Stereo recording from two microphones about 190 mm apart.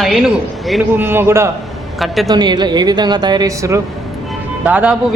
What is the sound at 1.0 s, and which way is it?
Speech, 10° right (ahead or behind).